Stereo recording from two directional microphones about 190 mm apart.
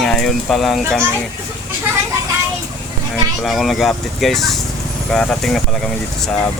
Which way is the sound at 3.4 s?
Centre (ahead or behind).